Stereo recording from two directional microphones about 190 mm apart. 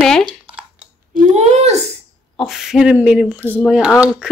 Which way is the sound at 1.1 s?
40° right (ahead or behind).